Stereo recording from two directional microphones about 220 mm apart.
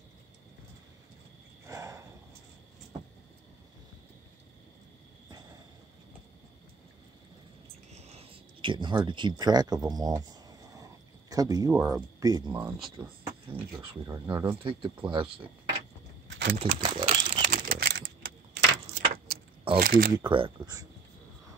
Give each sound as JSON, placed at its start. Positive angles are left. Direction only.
{"t": 1.7, "sound": "a sound", "side_deg": -15}
{"t": 8.0, "sound": "speech", "side_deg": -30}
{"t": 12.5, "sound": "speech", "side_deg": -5}
{"t": 12.9, "sound": "speech", "side_deg": -20}
{"t": 16.3, "sound": "a sound", "side_deg": -50}
{"t": 16.5, "sound": "speech", "side_deg": -25}
{"t": 17.5, "sound": "keys jangling", "side_deg": -40}
{"t": 19.8, "sound": "speech", "side_deg": -40}
{"t": 20.2, "sound": "speech", "side_deg": -25}